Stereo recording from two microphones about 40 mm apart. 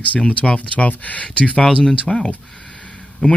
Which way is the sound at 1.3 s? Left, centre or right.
Left.